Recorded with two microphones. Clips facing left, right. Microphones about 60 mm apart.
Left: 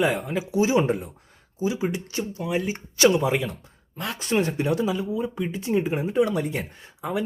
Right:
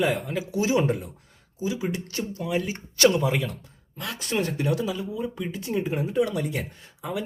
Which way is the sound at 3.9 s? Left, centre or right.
Left.